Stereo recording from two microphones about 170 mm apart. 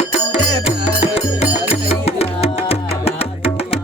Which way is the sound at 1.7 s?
35° left (ahead or behind).